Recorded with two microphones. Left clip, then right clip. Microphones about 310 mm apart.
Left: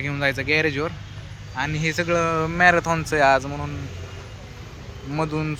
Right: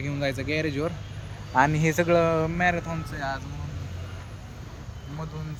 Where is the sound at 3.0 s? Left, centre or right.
Left.